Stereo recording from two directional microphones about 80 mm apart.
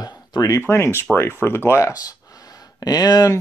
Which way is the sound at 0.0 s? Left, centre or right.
Left.